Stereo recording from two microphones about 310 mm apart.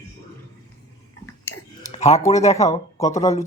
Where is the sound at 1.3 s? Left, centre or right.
Centre.